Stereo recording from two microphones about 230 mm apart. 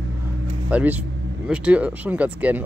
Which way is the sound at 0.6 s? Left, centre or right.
Centre.